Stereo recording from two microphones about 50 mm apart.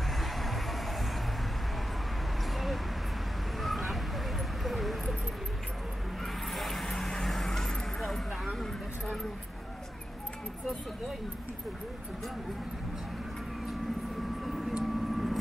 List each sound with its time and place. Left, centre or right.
0.1 s music: centre
2.5 s a sound: centre
6.2 s vehicle: centre
14.4 s vehicle: centre